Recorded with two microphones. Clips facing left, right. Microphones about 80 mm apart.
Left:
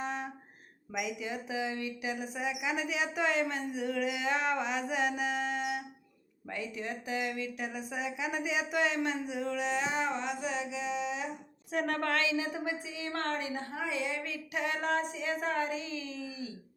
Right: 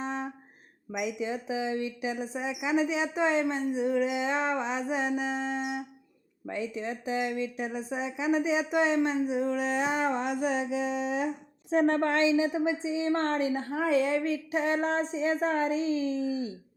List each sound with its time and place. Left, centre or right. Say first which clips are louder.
0.0 s music: right 3 dB; right
0.9 s speech: right 4 dB; right
11.7 s speech: right 7 dB; right